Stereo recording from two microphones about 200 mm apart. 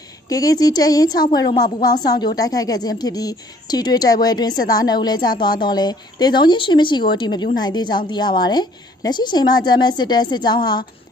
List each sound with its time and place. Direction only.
0.3 s speech: 20° left (ahead or behind)